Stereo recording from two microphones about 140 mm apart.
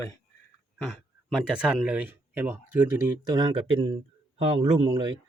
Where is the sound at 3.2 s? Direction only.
30° right (ahead or behind).